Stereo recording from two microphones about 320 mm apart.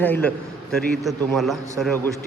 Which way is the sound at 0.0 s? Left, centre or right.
Centre.